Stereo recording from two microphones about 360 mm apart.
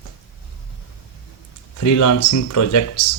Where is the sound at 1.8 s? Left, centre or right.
Left.